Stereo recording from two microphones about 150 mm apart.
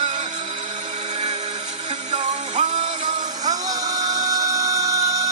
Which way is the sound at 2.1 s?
50° right (ahead or behind).